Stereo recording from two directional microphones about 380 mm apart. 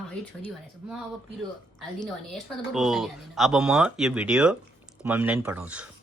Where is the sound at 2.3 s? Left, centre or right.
Centre.